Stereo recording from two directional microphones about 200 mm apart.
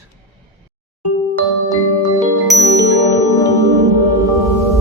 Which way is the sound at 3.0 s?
15° left (ahead or behind).